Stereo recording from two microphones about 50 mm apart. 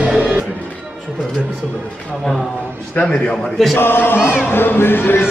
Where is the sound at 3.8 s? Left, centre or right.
Left.